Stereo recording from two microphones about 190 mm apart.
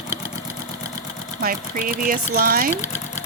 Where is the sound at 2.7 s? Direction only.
10° left (ahead or behind).